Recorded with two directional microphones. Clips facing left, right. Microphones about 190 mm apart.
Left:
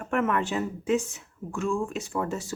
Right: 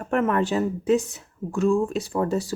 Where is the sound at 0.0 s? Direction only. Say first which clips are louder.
Right 4 dB; 35° right (ahead or behind).